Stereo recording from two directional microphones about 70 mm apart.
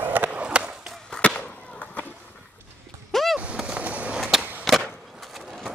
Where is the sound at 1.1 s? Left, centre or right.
Centre.